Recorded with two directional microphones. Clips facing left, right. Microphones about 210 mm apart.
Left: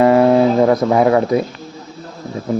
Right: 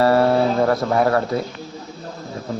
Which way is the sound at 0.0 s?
15° left (ahead or behind).